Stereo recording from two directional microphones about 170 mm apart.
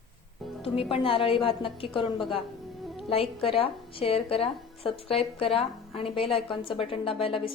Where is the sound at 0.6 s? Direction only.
35° left (ahead or behind).